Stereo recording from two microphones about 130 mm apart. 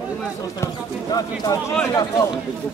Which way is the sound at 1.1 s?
30° left (ahead or behind).